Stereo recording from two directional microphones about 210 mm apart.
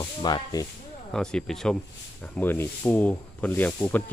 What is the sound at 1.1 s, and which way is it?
Speech, 5° left (ahead or behind).